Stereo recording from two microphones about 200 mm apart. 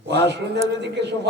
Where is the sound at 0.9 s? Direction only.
60° right (ahead or behind).